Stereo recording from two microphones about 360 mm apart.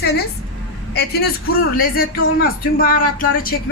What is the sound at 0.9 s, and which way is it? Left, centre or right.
Speech, left.